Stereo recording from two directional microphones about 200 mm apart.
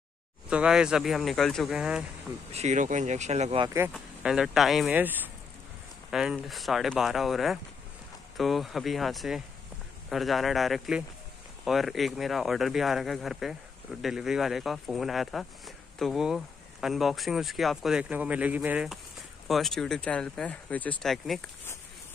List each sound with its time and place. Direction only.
0.5 s speech: 5° right (ahead or behind)
2.5 s speech: 35° right (ahead or behind)
3.9 s speech: centre (ahead or behind)